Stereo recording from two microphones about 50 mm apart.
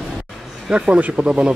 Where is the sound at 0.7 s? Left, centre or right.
Right.